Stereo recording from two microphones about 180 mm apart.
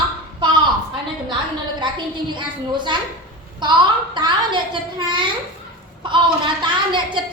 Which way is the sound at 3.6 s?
25° right (ahead or behind).